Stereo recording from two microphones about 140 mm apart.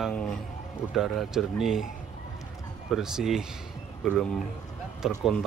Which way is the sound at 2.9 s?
5° right (ahead or behind).